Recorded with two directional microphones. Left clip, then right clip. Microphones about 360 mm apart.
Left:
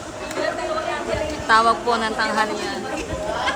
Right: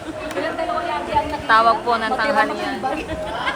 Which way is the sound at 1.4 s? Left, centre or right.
Centre.